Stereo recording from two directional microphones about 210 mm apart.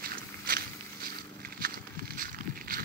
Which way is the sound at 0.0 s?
45° right (ahead or behind).